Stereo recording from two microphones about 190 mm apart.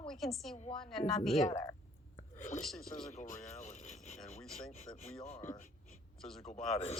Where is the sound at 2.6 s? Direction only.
Centre (ahead or behind).